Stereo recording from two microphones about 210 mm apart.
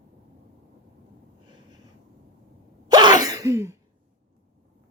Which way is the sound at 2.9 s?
20° right (ahead or behind).